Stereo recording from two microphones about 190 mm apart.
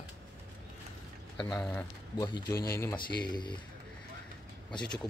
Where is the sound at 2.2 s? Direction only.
20° left (ahead or behind).